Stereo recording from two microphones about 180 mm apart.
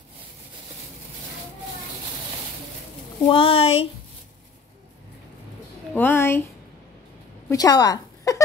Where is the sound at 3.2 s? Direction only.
30° left (ahead or behind).